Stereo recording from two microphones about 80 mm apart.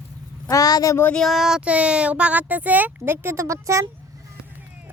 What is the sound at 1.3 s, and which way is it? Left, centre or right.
Speech, centre.